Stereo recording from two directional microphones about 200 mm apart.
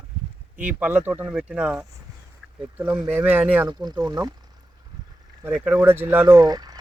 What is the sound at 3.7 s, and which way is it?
Speech, 20° right (ahead or behind).